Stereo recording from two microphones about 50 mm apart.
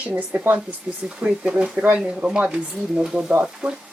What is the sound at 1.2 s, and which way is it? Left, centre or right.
Speech, centre.